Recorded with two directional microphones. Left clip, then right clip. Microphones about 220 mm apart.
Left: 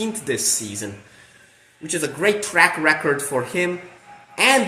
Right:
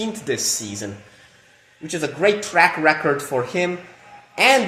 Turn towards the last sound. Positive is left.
turn(degrees=-15)  # may be behind; listen again after turning